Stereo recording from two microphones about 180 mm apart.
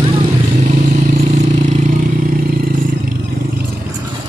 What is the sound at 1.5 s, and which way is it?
Vehicle, 45° right (ahead or behind).